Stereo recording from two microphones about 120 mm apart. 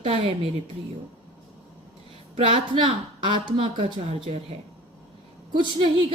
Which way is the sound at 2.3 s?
45° right (ahead or behind).